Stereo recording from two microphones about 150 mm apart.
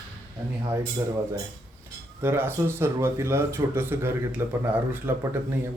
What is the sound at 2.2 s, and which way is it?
Speech, 15° right (ahead or behind).